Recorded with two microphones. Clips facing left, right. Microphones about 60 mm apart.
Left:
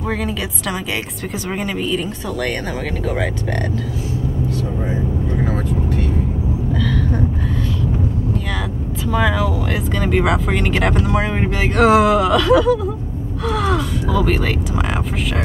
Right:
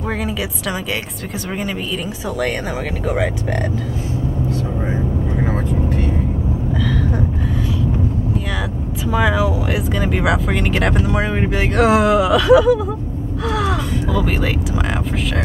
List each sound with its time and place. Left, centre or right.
5.7 s vehicle: right
6.7 s vehicle: centre
9.0 s speech: centre
13.5 s crow: centre